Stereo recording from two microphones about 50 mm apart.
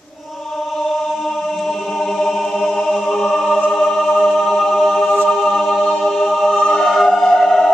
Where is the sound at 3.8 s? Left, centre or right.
Centre.